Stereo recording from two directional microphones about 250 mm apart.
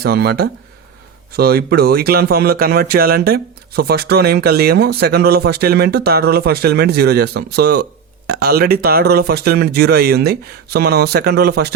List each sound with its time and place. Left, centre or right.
0.0 s speech: right